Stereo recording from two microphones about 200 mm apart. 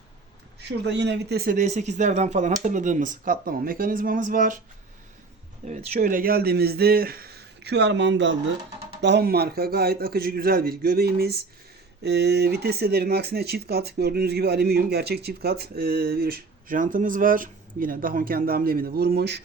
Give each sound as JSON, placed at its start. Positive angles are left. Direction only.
{"t": 0.9, "sound": "speech", "side_deg": -60}
{"t": 5.6, "sound": "speech", "side_deg": -35}